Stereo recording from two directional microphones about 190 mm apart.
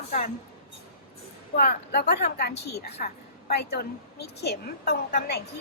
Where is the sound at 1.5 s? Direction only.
55° left (ahead or behind).